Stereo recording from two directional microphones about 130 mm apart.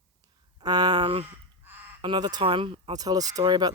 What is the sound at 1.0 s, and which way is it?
Speech, 45° right (ahead or behind).